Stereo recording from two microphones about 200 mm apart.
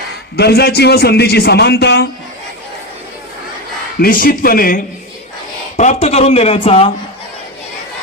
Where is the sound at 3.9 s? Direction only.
50° left (ahead or behind).